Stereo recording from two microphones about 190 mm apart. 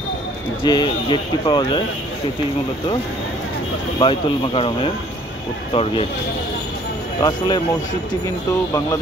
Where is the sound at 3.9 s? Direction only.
30° left (ahead or behind).